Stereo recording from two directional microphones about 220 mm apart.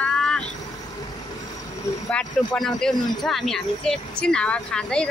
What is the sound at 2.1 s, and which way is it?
Speech, 5° left (ahead or behind).